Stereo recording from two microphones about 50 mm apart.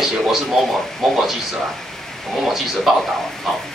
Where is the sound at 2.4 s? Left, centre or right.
Centre.